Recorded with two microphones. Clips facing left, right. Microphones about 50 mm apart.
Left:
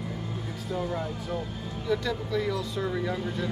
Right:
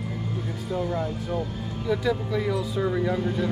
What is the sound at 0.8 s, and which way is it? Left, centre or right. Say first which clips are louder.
Speech: right 3 dB; centre.